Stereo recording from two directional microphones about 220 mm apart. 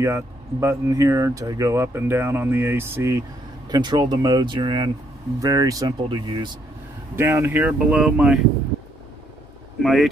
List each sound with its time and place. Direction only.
0.0 s speech: 10° right (ahead or behind)
7.2 s speech: 10° right (ahead or behind)
9.8 s speech: centre (ahead or behind)